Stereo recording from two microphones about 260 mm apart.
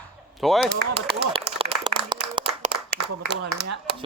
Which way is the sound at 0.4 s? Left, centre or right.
Centre.